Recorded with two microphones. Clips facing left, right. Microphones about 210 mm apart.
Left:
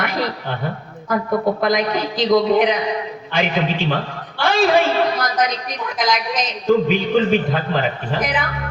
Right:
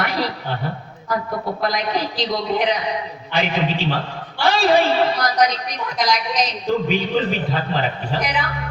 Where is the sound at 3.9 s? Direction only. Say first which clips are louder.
Left 2 dB; 50° left (ahead or behind).